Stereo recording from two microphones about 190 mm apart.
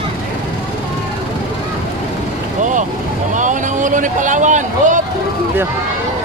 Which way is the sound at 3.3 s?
40° right (ahead or behind).